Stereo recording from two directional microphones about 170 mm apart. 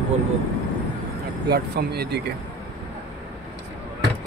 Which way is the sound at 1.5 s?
70° right (ahead or behind).